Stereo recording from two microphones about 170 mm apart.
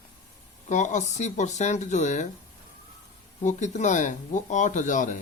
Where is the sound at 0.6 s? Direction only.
45° left (ahead or behind).